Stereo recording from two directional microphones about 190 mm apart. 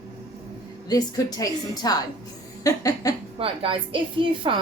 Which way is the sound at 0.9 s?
20° left (ahead or behind).